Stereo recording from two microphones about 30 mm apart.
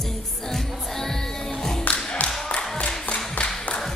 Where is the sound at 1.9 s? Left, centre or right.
Left.